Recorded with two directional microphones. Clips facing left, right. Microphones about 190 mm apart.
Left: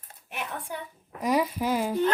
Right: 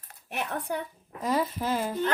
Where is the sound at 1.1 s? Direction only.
15° left (ahead or behind).